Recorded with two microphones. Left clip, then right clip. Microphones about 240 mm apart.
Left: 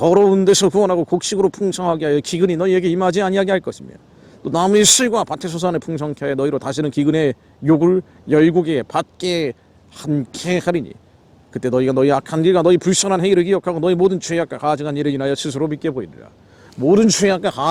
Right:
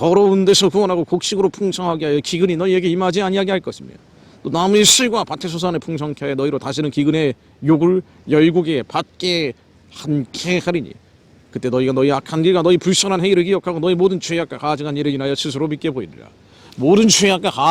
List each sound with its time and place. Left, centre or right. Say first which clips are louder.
0.0 s speech: left 1 dB; right